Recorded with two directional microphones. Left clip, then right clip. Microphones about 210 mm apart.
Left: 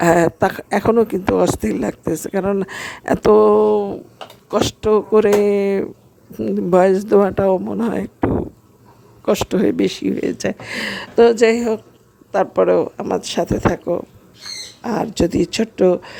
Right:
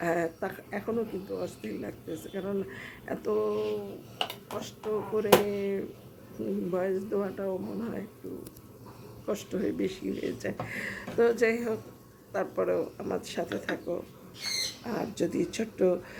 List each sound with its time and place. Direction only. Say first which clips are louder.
0.0 s speech: left 16 dB; 45° left (ahead or behind)
9.2 s speech: left 15 dB; 40° left (ahead or behind)